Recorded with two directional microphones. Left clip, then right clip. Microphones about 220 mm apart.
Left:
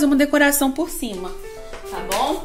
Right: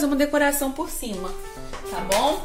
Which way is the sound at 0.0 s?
35° left (ahead or behind).